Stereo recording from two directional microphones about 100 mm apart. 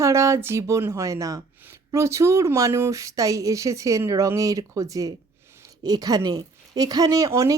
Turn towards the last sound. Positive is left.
turn(degrees=-30)  # may be behind; listen again after turning